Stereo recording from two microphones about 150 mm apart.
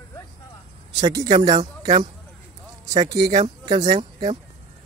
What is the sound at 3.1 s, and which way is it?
Speech, 25° right (ahead or behind).